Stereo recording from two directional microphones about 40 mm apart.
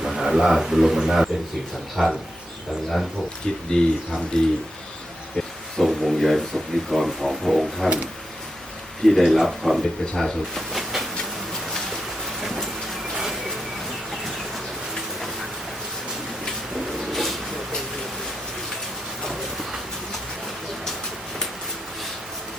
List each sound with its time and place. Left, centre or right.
0.0 s a man's voice: centre
2.0 s speech: centre
3.7 s speech: centre
5.8 s a sound: centre
6.9 s speech: centre
9.0 s speech: centre
10.2 s speech: centre
10.8 s train: centre
14.9 s a sound: centre
16.7 s a sound: centre
19.2 s train: centre